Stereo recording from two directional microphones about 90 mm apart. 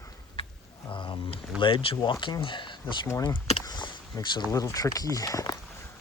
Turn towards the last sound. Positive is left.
turn(degrees=40)  # may be behind; listen again after turning